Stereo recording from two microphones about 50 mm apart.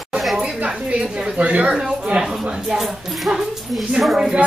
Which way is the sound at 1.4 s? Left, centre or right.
Right.